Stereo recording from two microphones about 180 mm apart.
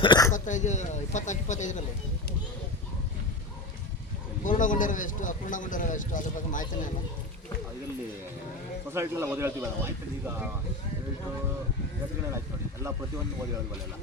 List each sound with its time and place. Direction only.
0.0 s speech: 25° left (ahead or behind)
0.3 s speech: 45° left (ahead or behind)
4.4 s speech: 45° left (ahead or behind)
8.9 s speech: 15° right (ahead or behind)